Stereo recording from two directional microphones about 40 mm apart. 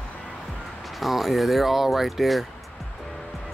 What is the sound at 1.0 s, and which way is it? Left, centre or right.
Speech, centre.